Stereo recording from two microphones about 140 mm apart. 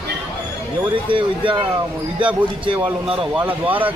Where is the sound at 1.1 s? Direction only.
35° right (ahead or behind).